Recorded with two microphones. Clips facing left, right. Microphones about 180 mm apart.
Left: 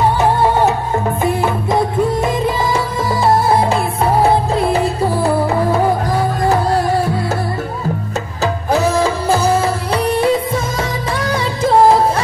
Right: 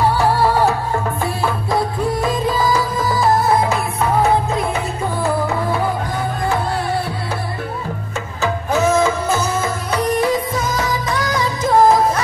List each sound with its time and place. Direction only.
0.2 s music: 20° left (ahead or behind); by 6.9 s 40° left (ahead or behind)
8.4 s music: 35° left (ahead or behind)